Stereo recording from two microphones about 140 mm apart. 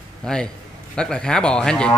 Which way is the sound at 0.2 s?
5° left (ahead or behind).